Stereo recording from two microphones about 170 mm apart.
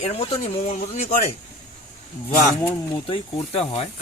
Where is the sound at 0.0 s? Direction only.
35° left (ahead or behind).